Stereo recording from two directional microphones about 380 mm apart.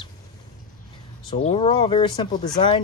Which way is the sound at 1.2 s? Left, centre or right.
Centre.